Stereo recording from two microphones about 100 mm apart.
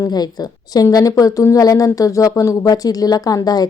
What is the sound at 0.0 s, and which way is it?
A woman's voice, 40° left (ahead or behind).